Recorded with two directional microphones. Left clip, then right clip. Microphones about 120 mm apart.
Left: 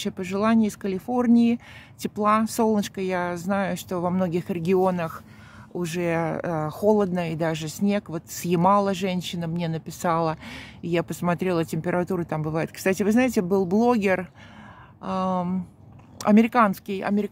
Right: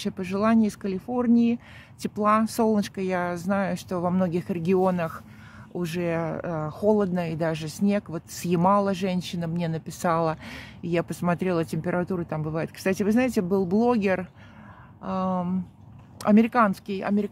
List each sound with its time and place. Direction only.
0.0 s speech: 15° left (ahead or behind)
0.9 s speech: 30° left (ahead or behind)
2.0 s speech: 15° left (ahead or behind)